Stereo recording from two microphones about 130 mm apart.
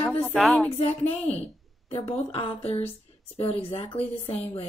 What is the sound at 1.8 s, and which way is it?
Speech, 50° left (ahead or behind).